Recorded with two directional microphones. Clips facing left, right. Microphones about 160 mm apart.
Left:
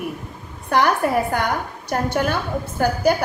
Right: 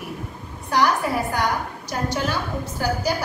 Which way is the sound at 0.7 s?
55° left (ahead or behind).